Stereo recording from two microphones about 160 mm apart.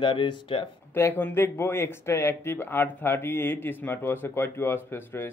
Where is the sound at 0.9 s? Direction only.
15° left (ahead or behind).